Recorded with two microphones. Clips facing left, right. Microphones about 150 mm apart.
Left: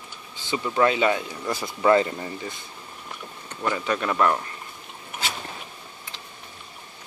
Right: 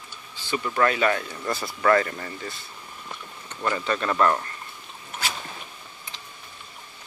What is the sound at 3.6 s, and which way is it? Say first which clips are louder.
Speech: even; 10° left (ahead or behind).